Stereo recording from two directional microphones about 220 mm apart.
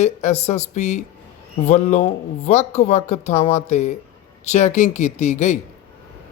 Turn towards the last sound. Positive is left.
turn(degrees=30)  # may be behind; listen again after turning